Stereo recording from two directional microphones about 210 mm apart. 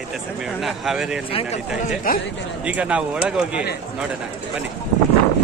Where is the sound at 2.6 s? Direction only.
5° right (ahead or behind).